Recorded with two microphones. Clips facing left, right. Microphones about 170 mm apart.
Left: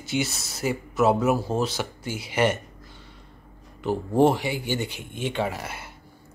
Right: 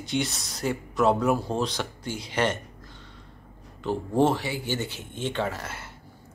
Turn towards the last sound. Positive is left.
turn(degrees=10)  # may be behind; listen again after turning